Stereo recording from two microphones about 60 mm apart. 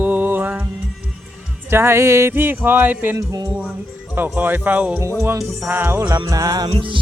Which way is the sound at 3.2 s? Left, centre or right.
Right.